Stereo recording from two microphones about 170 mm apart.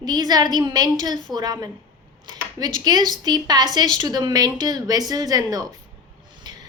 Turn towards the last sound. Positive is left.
turn(degrees=-25)  # may be behind; listen again after turning